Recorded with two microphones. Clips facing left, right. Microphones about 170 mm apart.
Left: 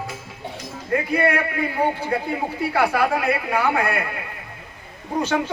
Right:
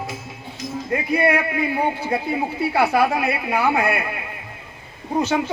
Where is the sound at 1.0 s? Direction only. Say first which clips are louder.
Right 2 dB; 10° right (ahead or behind).